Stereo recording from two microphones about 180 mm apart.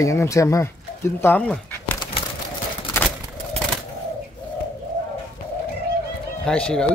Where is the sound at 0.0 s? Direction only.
15° left (ahead or behind).